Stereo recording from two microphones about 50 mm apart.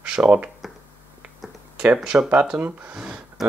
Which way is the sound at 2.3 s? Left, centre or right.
Centre.